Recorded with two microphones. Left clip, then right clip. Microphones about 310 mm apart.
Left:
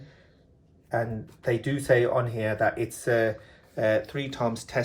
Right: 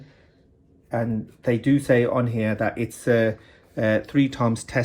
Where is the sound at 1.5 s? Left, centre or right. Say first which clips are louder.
Right 4 dB; centre.